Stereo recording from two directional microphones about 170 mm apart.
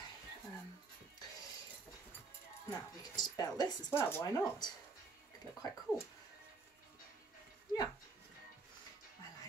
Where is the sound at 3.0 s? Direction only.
25° left (ahead or behind).